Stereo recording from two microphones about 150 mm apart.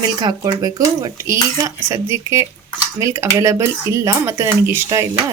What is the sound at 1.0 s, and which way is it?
Speech, 20° right (ahead or behind).